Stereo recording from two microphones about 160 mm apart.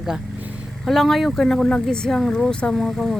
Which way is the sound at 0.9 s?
Centre (ahead or behind).